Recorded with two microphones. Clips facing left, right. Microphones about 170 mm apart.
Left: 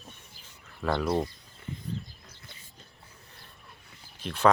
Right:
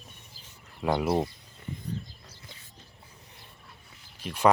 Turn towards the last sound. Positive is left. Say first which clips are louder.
# even
turn(degrees=-10)  # may be behind; listen again after turning